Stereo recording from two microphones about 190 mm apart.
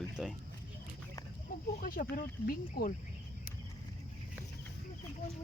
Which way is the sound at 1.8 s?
45° left (ahead or behind).